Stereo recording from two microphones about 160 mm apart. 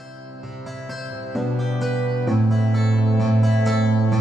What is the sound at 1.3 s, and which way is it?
Music, centre (ahead or behind).